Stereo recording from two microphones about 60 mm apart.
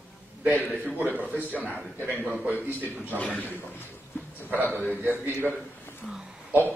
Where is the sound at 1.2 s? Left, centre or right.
Right.